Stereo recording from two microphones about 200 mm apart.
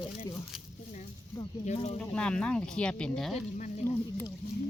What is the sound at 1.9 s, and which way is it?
Speech, 5° left (ahead or behind).